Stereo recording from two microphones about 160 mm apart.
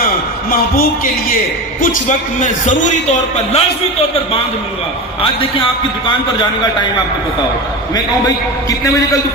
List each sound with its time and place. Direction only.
1.8 s a man's voice: 50° left (ahead or behind); by 5.6 s 35° left (ahead or behind)